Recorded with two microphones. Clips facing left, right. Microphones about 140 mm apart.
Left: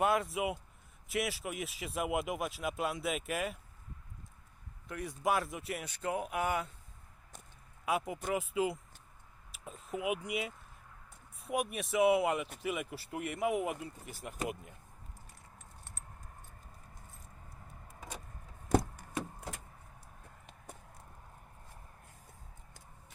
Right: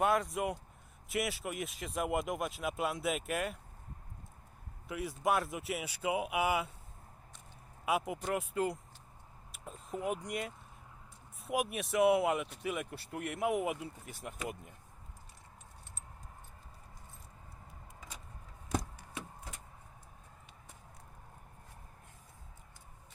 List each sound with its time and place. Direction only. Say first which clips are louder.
0.0 s speech: even; centre (ahead or behind)
4.9 s speech: right 1 dB; 5° right (ahead or behind)
7.9 s speech: even; centre (ahead or behind)
9.5 s a sound: left 1 dB; centre (ahead or behind)
10.2 s speech: left 1 dB; 5° left (ahead or behind)
18.7 s a sound: left 7 dB; 55° left (ahead or behind)